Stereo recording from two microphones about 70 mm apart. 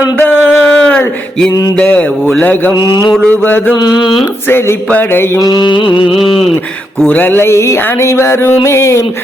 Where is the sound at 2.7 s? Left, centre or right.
Left.